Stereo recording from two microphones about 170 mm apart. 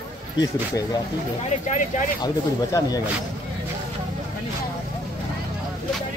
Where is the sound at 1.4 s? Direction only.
45° left (ahead or behind).